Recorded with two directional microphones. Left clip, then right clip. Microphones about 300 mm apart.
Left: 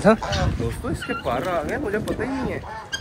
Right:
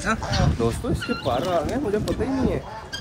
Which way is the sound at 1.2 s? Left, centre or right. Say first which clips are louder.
Right 1 dB; centre.